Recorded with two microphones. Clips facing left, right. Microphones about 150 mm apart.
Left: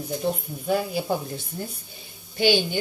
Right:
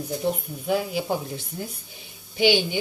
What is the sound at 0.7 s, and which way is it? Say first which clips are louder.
Speech: even; 15° right (ahead or behind).